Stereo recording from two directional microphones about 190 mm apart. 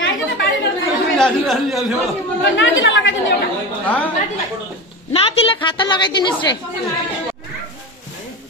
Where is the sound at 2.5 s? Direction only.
90° left.